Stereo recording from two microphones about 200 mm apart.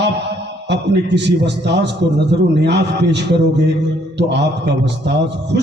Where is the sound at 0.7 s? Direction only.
60° right (ahead or behind).